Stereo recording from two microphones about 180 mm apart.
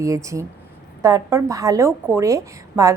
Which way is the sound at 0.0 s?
15° right (ahead or behind).